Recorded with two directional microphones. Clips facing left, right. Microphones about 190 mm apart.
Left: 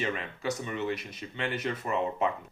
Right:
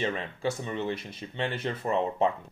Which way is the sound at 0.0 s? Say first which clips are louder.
Right 2 dB; 30° right (ahead or behind).